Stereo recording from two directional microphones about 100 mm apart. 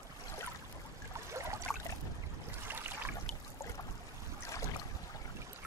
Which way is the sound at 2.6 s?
20° right (ahead or behind).